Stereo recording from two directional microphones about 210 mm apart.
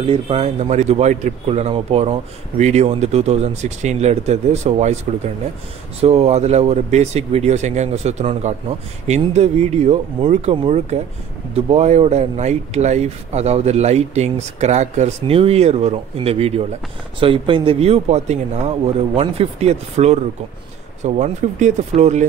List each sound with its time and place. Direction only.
0.0 s a man's voice: 30° right (ahead or behind)